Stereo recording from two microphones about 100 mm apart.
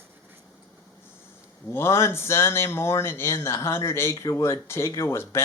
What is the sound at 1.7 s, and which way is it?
Speech, 25° left (ahead or behind).